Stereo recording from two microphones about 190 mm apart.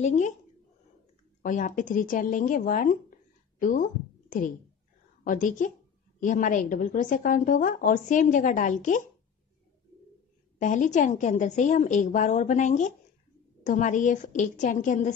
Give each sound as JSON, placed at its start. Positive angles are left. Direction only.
{"t": 0.0, "sound": "a woman's voice", "side_deg": 40}
{"t": 1.4, "sound": "a woman's voice", "side_deg": 45}
{"t": 5.2, "sound": "a woman's voice", "side_deg": 45}
{"t": 10.6, "sound": "a woman's voice", "side_deg": 40}